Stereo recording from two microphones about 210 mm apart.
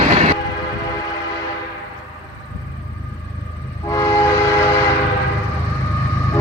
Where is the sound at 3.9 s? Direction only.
15° left (ahead or behind).